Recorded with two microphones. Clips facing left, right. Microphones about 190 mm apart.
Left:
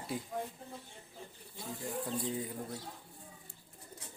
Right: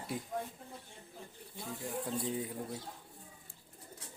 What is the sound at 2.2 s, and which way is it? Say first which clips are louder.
Speech: even; centre (ahead or behind).